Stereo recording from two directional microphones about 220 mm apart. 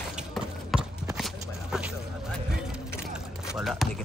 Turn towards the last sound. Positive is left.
turn(degrees=0)  # may be behind; listen again after turning